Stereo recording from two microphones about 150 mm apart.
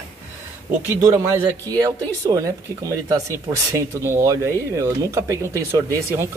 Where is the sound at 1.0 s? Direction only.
20° right (ahead or behind).